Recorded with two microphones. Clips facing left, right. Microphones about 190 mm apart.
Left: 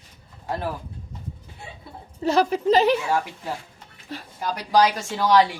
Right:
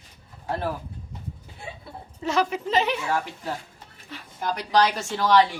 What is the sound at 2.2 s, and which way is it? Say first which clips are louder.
Speech: left 5 dB; 35° left (ahead or behind).